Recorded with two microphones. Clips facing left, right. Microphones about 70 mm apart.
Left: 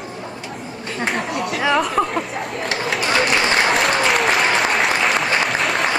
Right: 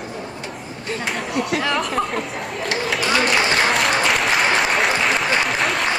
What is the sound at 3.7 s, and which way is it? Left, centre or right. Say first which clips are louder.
Applause: left 1 dB; centre.